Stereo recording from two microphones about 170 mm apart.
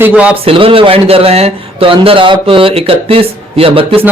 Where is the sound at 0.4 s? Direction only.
35° right (ahead or behind).